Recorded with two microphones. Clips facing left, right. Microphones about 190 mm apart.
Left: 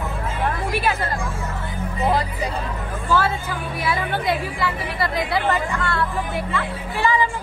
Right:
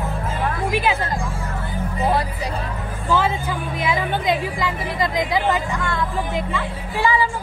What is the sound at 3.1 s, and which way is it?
Music, 15° right (ahead or behind).